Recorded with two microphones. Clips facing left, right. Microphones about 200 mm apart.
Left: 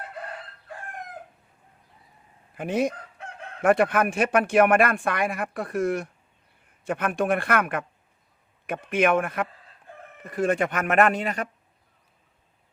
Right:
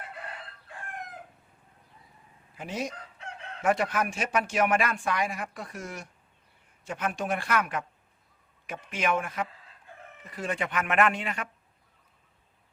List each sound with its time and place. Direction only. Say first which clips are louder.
2.6 s chicken: left 9 dB; 55° left (ahead or behind)
10.2 s speech: left 9 dB; 50° left (ahead or behind)